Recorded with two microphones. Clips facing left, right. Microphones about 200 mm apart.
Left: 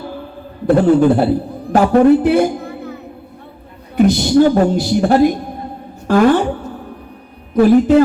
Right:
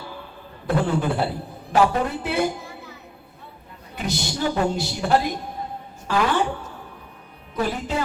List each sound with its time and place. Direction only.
0.7 s a woman's voice: 45° left (ahead or behind)